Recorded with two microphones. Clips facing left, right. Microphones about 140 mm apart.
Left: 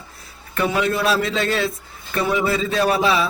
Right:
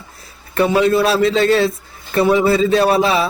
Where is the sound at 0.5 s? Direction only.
35° right (ahead or behind).